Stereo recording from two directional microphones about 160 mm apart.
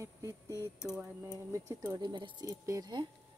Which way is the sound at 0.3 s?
20° left (ahead or behind).